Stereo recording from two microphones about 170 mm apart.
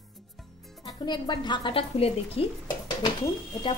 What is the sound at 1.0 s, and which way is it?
A woman's voice, 25° left (ahead or behind).